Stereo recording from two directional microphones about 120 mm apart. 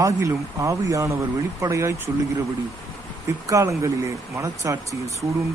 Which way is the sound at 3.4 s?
25° right (ahead or behind).